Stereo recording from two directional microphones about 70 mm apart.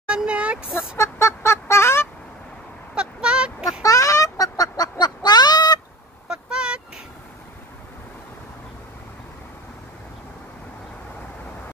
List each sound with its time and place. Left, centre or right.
0.1 s speech: centre
0.9 s fowl: left
2.9 s a sound: centre
3.8 s fowl: left
6.2 s vehicle: centre